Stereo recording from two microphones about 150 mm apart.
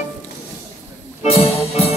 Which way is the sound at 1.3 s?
40° left (ahead or behind).